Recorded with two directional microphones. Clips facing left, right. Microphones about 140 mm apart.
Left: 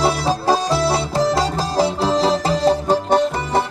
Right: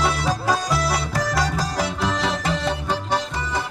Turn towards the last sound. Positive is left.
turn(degrees=35)  # may be behind; listen again after turning